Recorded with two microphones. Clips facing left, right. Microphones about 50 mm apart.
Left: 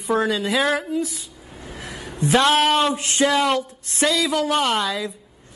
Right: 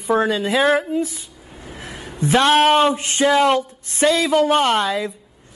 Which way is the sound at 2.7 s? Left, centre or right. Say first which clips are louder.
Right 4 dB; right.